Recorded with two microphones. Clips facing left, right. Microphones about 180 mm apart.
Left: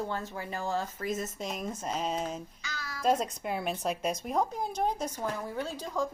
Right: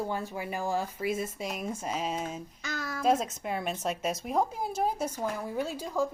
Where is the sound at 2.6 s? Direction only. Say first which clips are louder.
Right 10 dB; 50° right (ahead or behind).